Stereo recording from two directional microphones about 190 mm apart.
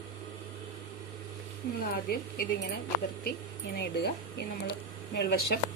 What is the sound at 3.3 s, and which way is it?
Speech, 60° left (ahead or behind).